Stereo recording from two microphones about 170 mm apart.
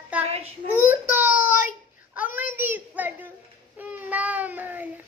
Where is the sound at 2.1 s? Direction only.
10° right (ahead or behind).